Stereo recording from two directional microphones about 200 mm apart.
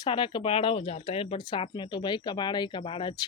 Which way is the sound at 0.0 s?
25° left (ahead or behind).